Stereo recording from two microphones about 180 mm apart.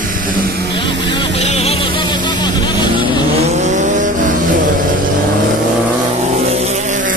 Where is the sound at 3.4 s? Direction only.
40° right (ahead or behind).